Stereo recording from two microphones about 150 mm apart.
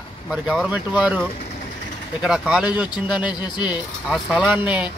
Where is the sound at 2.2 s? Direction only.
5° right (ahead or behind).